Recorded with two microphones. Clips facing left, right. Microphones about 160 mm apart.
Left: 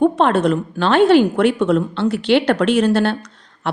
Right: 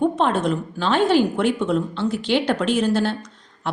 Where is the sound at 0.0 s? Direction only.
70° left (ahead or behind).